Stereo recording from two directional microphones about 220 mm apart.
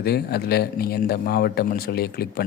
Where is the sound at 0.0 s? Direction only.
45° left (ahead or behind).